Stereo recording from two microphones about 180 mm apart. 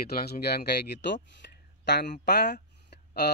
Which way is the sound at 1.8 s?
70° left (ahead or behind).